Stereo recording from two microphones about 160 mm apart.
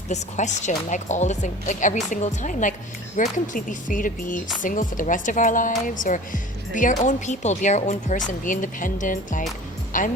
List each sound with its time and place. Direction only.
0.1 s speech: 45° left (ahead or behind)